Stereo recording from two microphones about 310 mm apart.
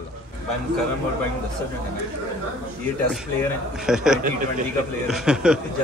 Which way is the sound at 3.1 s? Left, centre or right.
Centre.